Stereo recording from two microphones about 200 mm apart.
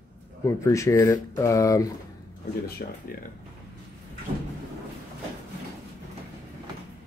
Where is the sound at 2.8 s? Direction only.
50° left (ahead or behind).